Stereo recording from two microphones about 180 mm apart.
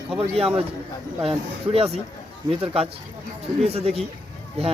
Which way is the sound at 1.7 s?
35° right (ahead or behind).